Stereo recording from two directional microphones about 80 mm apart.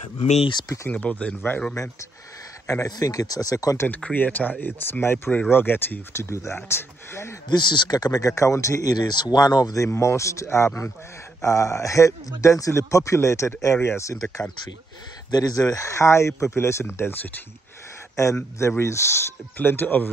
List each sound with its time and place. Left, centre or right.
0.9 s speech: centre
2.6 s speech: left
4.0 s speech: left
7.4 s speech: left
8.9 s speech: left
9.8 s speech: left
15.3 s speech: left
18.1 s speech: left